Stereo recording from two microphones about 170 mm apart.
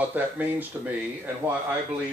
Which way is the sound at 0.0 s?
10° right (ahead or behind).